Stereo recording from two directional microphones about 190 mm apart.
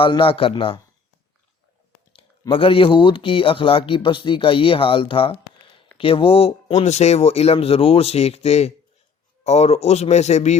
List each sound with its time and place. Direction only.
0.0 s speech: 30° left (ahead or behind)
2.4 s speech: 30° left (ahead or behind)